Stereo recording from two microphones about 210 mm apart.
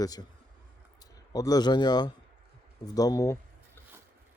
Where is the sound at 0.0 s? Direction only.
20° left (ahead or behind).